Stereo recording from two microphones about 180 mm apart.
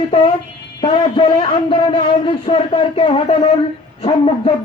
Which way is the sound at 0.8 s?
30° left (ahead or behind).